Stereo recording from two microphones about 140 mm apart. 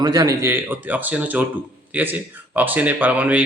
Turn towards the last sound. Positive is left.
turn(degrees=-10)  # may be behind; listen again after turning